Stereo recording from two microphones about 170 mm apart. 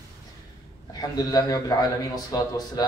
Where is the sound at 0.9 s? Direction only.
25° left (ahead or behind).